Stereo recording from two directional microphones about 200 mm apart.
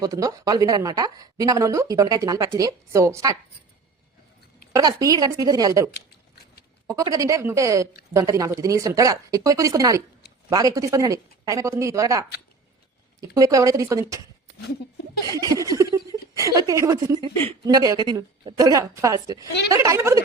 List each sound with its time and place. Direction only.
0.0 s a woman's voice: 15° right (ahead or behind)
4.7 s a woman's voice: 20° right (ahead or behind)
5.9 s a sound: 55° left (ahead or behind)
6.8 s a woman's voice: 15° right (ahead or behind)
13.3 s a woman's voice: 15° right (ahead or behind)
15.3 s a sound: 20° right (ahead or behind)
16.4 s a woman's voice: 15° right (ahead or behind)